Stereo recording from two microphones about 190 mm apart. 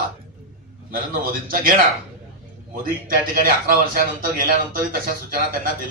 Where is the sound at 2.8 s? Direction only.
50° right (ahead or behind).